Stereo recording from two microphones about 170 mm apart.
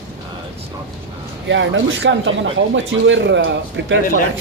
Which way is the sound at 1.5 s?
90° right.